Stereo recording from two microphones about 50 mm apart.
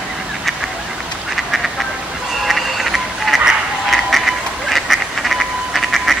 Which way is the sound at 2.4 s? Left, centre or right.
Centre.